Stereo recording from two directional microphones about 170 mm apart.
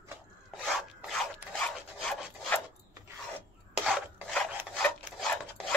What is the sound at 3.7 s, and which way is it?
Filing, centre (ahead or behind).